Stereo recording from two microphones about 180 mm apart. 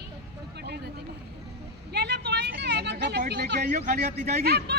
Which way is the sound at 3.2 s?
65° right (ahead or behind).